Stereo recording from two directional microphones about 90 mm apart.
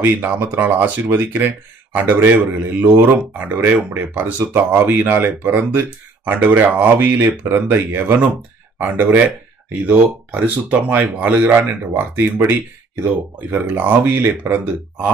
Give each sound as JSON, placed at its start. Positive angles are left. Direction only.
{"t": 0.0, "sound": "speech", "side_deg": -20}
{"t": 10.3, "sound": "speech", "side_deg": -20}